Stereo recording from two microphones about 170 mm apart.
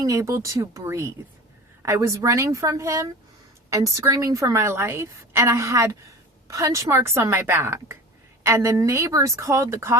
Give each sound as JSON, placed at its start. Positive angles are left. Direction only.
{"t": 0.0, "sound": "a woman's voice", "side_deg": -20}